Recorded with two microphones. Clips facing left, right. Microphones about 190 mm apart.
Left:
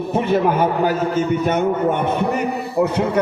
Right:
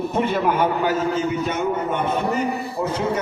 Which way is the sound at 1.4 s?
55° left (ahead or behind).